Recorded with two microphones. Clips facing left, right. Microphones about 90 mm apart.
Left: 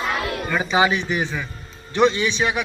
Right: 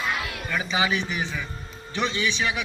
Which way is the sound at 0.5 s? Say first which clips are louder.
Left 6 dB; 40° left (ahead or behind).